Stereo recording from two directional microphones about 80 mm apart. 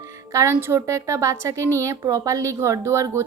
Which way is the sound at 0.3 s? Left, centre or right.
Right.